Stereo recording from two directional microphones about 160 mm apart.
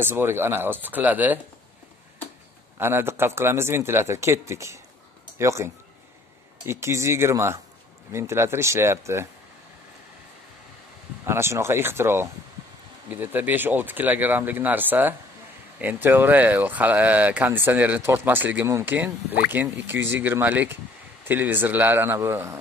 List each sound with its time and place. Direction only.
0.0 s speech: 15° right (ahead or behind)
2.8 s speech: 15° right (ahead or behind)
11.2 s speech: 15° right (ahead or behind)